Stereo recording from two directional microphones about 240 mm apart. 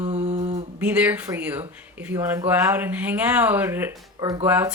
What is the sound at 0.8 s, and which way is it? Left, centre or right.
Speech, centre.